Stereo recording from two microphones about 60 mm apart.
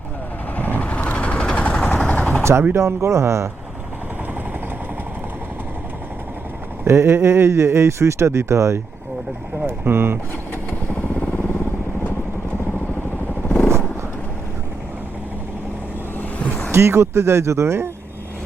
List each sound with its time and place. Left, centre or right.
0.5 s vehicle: left
2.4 s a sound: right
2.7 s speech: right
6.8 s speech: right
9.8 s speech: right
16.4 s vehicle: left
16.7 s speech: right